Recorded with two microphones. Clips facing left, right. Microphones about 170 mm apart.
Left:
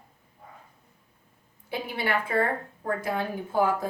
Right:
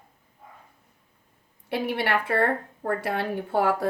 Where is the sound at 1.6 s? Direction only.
65° right (ahead or behind).